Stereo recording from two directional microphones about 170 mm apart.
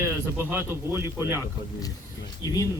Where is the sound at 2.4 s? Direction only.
20° left (ahead or behind).